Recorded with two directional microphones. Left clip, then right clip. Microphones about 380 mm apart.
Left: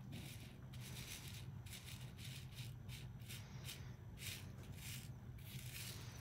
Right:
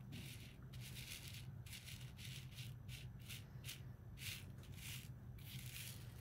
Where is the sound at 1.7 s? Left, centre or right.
Centre.